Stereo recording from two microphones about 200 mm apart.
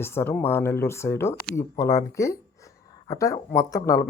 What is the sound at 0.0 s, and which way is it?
Speech, 10° left (ahead or behind).